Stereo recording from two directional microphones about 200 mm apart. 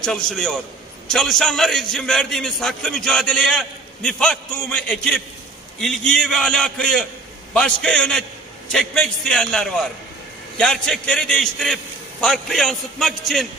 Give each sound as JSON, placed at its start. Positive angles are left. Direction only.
{"t": 0.0, "sound": "a man's voice", "side_deg": 5}